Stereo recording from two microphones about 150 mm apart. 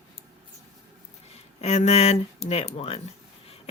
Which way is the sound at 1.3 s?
45° left (ahead or behind).